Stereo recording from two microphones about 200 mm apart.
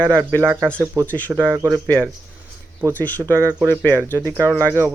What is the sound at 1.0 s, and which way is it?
Speech, 10° left (ahead or behind).